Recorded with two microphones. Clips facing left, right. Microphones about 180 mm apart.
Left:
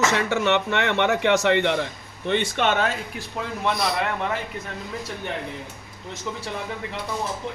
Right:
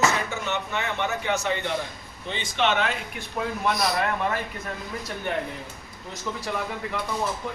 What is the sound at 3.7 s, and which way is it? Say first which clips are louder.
Speech: left 1 dB; 25° left (ahead or behind).